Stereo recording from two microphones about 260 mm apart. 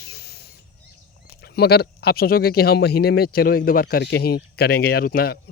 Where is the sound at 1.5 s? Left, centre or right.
Left.